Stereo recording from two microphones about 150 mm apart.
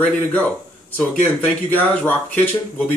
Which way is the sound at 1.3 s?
10° left (ahead or behind).